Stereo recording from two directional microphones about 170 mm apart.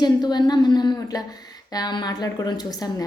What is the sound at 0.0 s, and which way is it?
A woman's voice, 25° left (ahead or behind).